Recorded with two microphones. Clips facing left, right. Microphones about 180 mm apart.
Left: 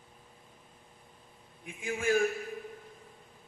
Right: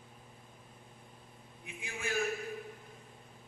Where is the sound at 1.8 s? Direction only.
45° left (ahead or behind).